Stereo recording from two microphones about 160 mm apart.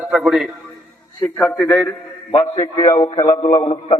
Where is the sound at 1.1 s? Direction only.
15° left (ahead or behind).